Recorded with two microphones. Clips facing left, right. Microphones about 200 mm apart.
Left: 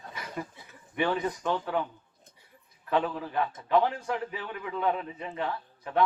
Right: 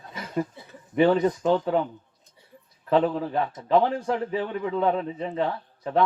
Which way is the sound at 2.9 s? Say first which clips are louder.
Right 6 dB; 35° right (ahead or behind).